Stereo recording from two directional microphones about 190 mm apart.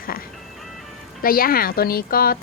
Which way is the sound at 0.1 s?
50° left (ahead or behind).